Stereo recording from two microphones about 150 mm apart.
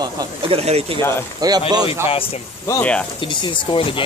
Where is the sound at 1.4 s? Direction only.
25° right (ahead or behind).